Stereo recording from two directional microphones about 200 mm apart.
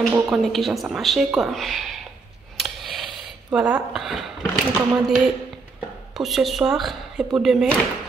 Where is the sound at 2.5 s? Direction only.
Centre (ahead or behind).